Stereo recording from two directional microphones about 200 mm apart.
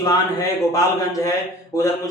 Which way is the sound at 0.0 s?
15° left (ahead or behind).